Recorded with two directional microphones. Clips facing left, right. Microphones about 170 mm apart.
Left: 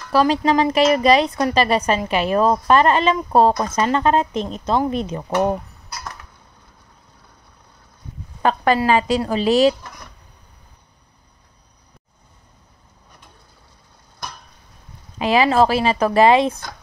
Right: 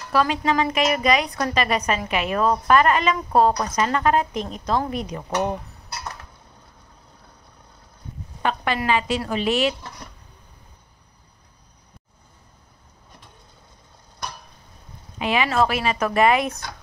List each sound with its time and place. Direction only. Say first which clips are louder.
0.1 s a woman's voice: left 5 dB; 30° left (ahead or behind)
8.4 s a woman's voice: left 7 dB; 40° left (ahead or behind)
15.1 s a woman's voice: left 5 dB; 35° left (ahead or behind)